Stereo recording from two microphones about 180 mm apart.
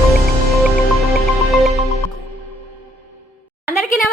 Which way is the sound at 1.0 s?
Centre (ahead or behind).